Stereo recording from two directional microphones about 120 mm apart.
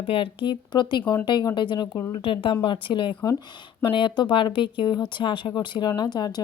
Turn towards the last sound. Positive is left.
turn(degrees=35)  # may be behind; listen again after turning